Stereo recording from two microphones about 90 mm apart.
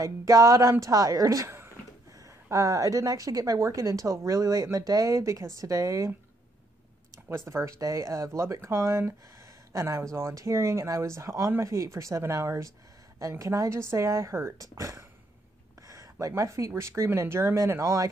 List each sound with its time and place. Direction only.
0.0 s speech: 40° right (ahead or behind)
2.5 s speech: 35° right (ahead or behind)
7.2 s speech: 30° right (ahead or behind)